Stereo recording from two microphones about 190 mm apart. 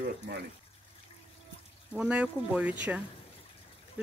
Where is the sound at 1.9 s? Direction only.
5° right (ahead or behind).